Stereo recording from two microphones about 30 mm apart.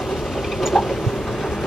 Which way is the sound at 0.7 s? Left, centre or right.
Centre.